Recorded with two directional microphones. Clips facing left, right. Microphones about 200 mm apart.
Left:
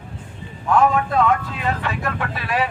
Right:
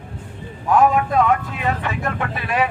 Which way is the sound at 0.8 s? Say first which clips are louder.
Right 1 dB; 15° right (ahead or behind).